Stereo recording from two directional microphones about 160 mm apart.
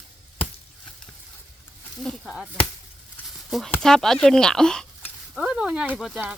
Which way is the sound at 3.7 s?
5° left (ahead or behind).